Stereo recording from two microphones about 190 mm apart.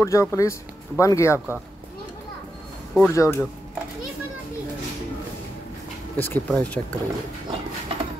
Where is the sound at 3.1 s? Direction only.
15° left (ahead or behind).